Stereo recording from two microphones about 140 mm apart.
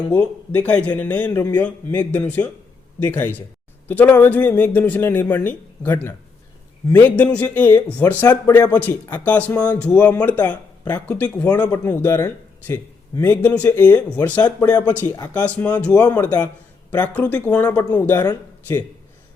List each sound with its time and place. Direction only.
0.1 s speech: 10° left (ahead or behind)